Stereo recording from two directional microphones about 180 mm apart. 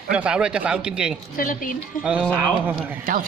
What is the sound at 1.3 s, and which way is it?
Speech, 50° left (ahead or behind).